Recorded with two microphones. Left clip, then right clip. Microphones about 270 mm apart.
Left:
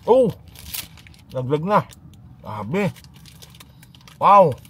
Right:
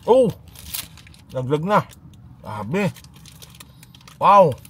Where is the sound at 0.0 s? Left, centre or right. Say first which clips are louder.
Even; right.